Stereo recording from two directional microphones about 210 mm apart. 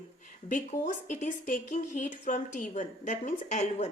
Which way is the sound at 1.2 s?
35° left (ahead or behind).